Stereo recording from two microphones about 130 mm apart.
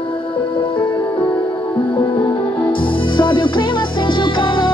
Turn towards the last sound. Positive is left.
turn(degrees=40)  # may be behind; listen again after turning